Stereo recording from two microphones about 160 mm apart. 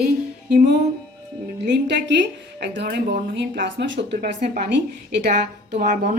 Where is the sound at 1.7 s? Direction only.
90° right; by 4.8 s 65° right (ahead or behind).